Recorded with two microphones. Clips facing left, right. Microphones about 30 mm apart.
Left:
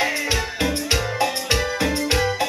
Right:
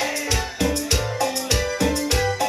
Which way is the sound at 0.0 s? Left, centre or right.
Left.